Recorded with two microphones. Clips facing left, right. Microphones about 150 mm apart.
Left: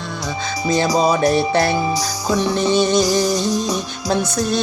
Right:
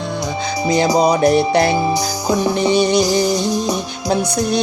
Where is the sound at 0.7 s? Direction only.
15° right (ahead or behind).